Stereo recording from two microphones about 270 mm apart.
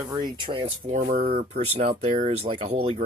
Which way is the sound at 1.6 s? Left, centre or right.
Right.